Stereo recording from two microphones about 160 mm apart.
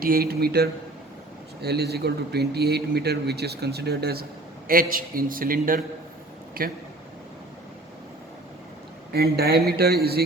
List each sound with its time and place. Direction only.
0.0 s speech: 70° right (ahead or behind)
1.6 s a man's voice: 90° right
4.7 s a man's voice: 60° right (ahead or behind)
9.1 s speech: 80° right